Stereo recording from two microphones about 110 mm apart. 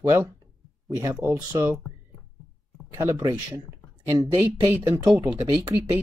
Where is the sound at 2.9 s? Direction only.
25° right (ahead or behind).